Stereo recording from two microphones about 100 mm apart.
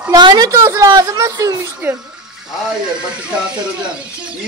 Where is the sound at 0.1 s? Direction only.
45° right (ahead or behind).